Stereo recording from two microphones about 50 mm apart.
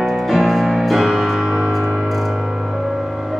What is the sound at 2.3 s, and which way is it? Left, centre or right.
Music, centre.